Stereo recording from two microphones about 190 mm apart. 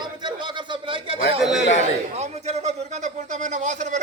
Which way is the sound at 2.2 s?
35° right (ahead or behind).